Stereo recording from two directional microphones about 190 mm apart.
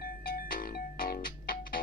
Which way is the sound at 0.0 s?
55° left (ahead or behind).